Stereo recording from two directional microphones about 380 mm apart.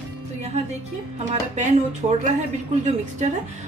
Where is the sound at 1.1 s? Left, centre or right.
Centre.